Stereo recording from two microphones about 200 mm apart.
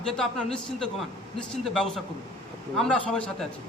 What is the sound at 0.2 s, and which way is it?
A man's voice, 5° left (ahead or behind).